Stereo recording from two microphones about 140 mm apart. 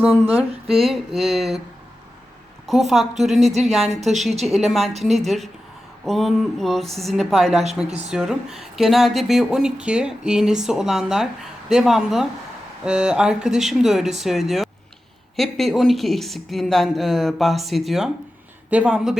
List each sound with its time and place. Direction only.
0.7 s speech: centre (ahead or behind)
2.6 s speech: centre (ahead or behind)
7.9 s speech: 50° right (ahead or behind)
8.1 s speech: 5° right (ahead or behind)